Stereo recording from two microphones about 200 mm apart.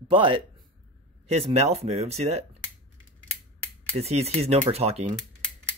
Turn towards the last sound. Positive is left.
turn(degrees=-30)  # may be behind; listen again after turning